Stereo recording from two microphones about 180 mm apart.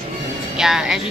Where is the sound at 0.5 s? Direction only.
5° right (ahead or behind).